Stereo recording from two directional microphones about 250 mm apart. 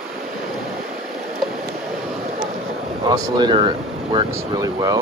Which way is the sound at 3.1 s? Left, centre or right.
Centre.